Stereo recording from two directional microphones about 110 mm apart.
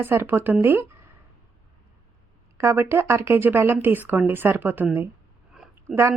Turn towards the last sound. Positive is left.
turn(degrees=-25)  # may be behind; listen again after turning